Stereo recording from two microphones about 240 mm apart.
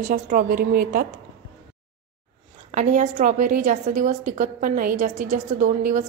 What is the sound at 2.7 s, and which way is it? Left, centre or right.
A woman's voice, right.